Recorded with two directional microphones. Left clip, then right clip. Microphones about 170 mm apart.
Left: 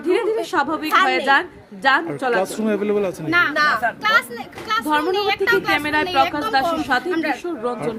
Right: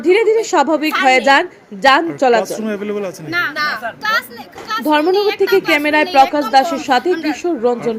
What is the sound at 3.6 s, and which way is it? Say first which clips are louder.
Speech: left 1 dB; centre (ahead or behind).